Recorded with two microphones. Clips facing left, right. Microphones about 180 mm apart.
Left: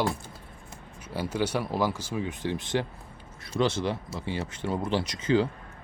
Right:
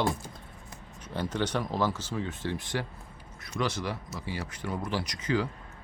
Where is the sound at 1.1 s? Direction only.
10° left (ahead or behind).